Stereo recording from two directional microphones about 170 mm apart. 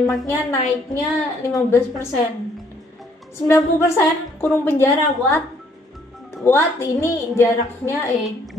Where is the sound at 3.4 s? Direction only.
15° left (ahead or behind).